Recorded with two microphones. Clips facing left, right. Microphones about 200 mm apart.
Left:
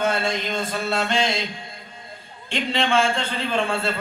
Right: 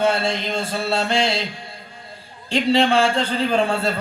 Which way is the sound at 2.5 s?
35° right (ahead or behind).